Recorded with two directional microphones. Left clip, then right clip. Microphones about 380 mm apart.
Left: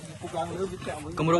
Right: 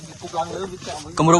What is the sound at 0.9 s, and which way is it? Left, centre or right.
Speech, centre.